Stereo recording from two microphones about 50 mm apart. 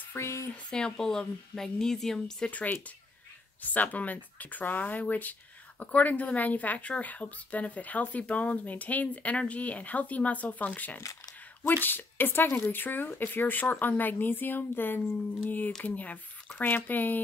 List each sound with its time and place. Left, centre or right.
0.2 s a sound: left
0.7 s speech: centre
2.5 s speech: left